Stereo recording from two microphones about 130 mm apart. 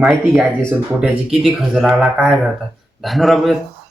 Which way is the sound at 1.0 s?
Centre (ahead or behind).